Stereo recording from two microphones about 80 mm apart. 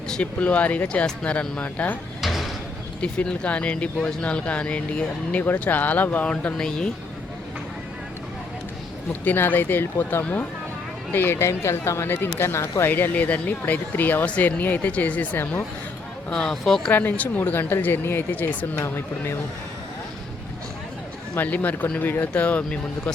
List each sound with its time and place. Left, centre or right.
0.1 s speech: centre
2.2 s a sound: centre
3.0 s speech: centre
9.2 s speech: left
12.9 s speech: centre
16.3 s speech: centre
16.9 s speech: left
21.3 s speech: left